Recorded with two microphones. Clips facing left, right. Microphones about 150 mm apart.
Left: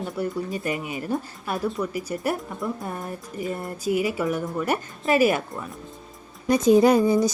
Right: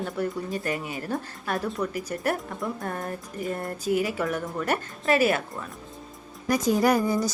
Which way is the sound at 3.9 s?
45° right (ahead or behind).